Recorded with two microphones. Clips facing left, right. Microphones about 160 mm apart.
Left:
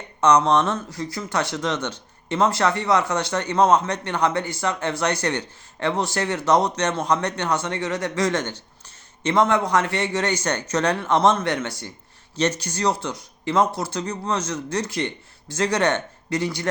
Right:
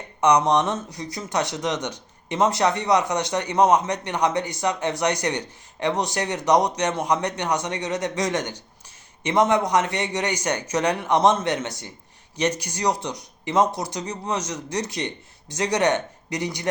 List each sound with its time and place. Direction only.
0.2 s speech: 15° right (ahead or behind)